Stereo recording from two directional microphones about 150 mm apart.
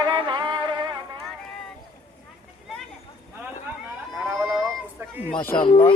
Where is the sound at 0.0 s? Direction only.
30° right (ahead or behind).